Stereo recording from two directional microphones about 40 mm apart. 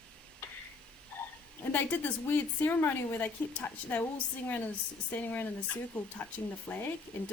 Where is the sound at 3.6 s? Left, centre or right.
Left.